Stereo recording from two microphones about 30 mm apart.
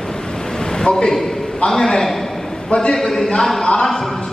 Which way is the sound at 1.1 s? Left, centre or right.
Centre.